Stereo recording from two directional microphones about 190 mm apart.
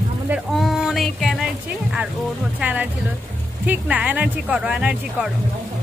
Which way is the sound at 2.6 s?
10° right (ahead or behind).